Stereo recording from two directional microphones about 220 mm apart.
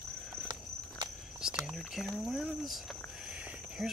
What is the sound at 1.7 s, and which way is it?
Speech, centre (ahead or behind).